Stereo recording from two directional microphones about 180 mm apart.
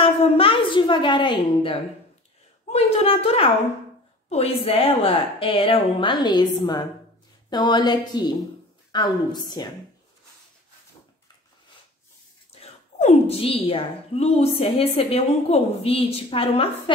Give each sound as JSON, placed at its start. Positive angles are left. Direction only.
{"t": 0.0, "sound": "a woman's voice", "side_deg": 30}
{"t": 13.0, "sound": "a woman's voice", "side_deg": 35}